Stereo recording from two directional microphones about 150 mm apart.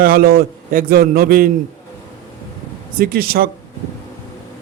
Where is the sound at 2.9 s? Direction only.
85° right.